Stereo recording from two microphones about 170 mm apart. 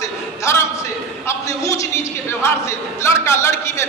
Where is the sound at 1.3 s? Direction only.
20° left (ahead or behind).